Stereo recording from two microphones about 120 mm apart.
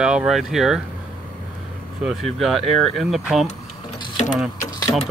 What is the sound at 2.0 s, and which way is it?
Speech, 5° right (ahead or behind).